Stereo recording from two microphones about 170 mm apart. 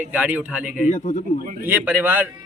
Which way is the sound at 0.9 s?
45° left (ahead or behind).